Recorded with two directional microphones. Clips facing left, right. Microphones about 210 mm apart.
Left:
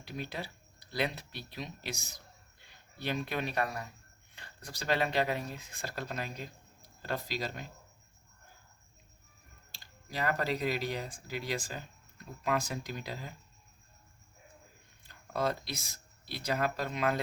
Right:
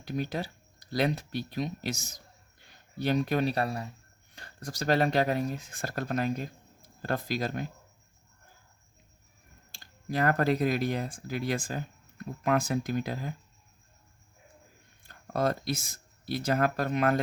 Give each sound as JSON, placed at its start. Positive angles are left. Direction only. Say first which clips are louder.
{"t": 0.0, "sound": "speech", "louder": "right 7 dB", "side_deg": -45}
{"t": 4.4, "sound": "speech", "louder": "right 8 dB", "side_deg": -45}
{"t": 9.7, "sound": "speech", "louder": "right 8 dB", "side_deg": -50}
{"t": 15.0, "sound": "speech", "louder": "right 4 dB", "side_deg": -45}